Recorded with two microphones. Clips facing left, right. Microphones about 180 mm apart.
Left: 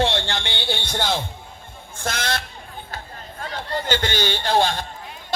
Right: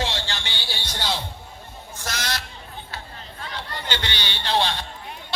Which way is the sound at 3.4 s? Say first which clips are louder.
Left 7 dB; 45° left (ahead or behind).